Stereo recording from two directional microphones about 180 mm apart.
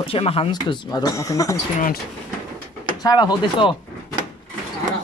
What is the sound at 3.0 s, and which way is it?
Speech, 20° left (ahead or behind).